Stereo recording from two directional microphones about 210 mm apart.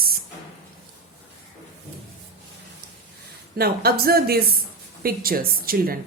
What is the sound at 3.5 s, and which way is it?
Speech, 45° right (ahead or behind).